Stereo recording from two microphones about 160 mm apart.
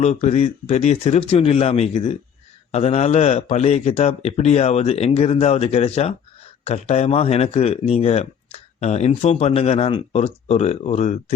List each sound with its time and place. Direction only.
0.0 s speech: 40° left (ahead or behind)